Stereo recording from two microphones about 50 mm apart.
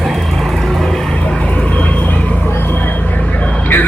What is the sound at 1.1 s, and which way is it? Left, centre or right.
Vehicle, left.